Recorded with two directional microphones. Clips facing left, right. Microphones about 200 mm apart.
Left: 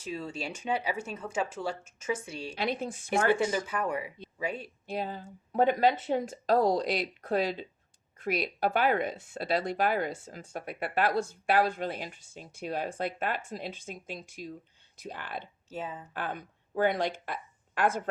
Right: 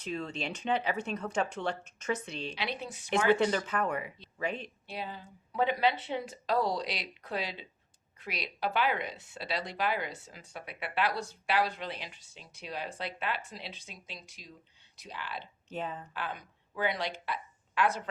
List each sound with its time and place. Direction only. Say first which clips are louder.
0.0 s speech: even; 5° left (ahead or behind)
2.6 s speech: left 6 dB; 45° left (ahead or behind)
3.3 s speech: right 1 dB; 10° left (ahead or behind)
4.9 s speech: left 7 dB; 45° left (ahead or behind)
15.7 s speech: even; 5° left (ahead or behind)
16.1 s a woman's voice: left 3 dB; 50° left (ahead or behind)